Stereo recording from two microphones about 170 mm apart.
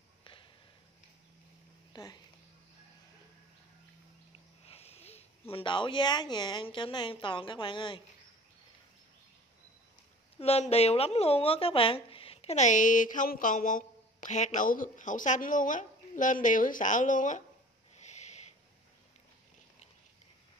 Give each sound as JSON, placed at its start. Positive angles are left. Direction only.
{"t": 0.2, "sound": "a sound", "side_deg": 30}
{"t": 2.0, "sound": "speech", "side_deg": 20}
{"t": 4.6, "sound": "a sound", "side_deg": 35}
{"t": 5.5, "sound": "a woman's voice", "side_deg": 30}
{"t": 10.4, "sound": "speech", "side_deg": 35}
{"t": 17.9, "sound": "owl", "side_deg": 40}